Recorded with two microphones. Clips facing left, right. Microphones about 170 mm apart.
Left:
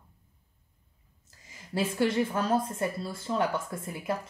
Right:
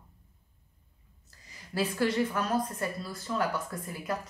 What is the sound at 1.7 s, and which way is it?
Speech, 25° left (ahead or behind).